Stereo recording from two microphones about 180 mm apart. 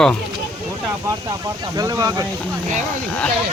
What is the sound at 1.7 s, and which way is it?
Speech, 20° right (ahead or behind).